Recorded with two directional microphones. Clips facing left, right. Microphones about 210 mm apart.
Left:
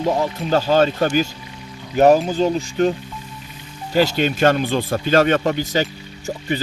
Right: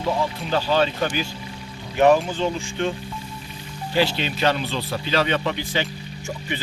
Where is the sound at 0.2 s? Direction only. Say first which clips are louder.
Left 4 dB; 45° left (ahead or behind).